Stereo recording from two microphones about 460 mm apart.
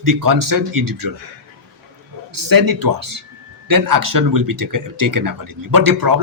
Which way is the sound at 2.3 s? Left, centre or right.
Right.